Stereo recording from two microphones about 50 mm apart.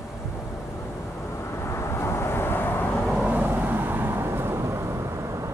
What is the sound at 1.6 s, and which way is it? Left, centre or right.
Vehicle, left.